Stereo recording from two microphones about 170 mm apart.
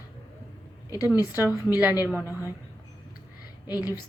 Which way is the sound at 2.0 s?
15° left (ahead or behind).